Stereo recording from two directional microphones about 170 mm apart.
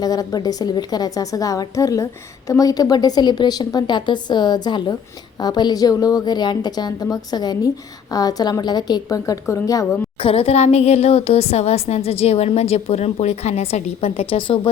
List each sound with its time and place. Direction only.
0.0 s a woman's voice: 20° left (ahead or behind)
10.2 s a woman's voice: 35° left (ahead or behind)